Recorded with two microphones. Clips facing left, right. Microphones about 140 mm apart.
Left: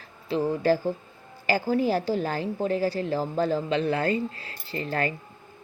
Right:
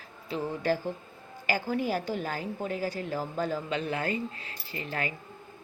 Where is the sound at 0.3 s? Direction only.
35° left (ahead or behind).